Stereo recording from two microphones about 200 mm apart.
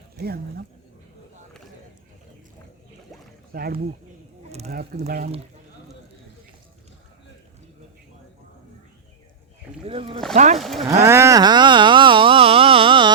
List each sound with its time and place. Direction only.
0.2 s speech: 50° right (ahead or behind)
3.5 s speech: 50° right (ahead or behind)
9.8 s speech: 30° right (ahead or behind)
10.6 s speech: centre (ahead or behind)
10.8 s a sound: 15° right (ahead or behind)